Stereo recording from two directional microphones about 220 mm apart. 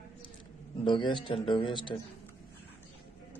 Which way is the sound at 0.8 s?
20° left (ahead or behind).